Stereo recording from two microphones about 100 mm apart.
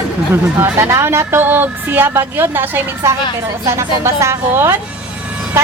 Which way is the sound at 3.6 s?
30° right (ahead or behind).